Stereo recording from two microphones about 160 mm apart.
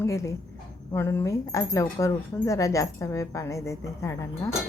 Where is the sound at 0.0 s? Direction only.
20° left (ahead or behind).